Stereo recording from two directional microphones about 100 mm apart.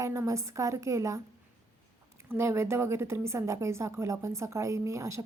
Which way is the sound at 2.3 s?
25° right (ahead or behind).